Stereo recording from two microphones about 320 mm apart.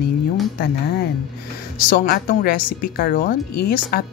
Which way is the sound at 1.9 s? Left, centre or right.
Left.